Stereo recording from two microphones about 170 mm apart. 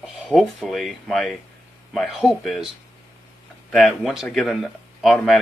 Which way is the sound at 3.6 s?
5° left (ahead or behind).